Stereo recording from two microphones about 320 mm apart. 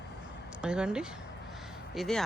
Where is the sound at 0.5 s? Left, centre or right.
Centre.